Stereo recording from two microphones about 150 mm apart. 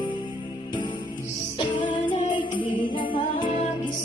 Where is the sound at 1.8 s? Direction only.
35° left (ahead or behind).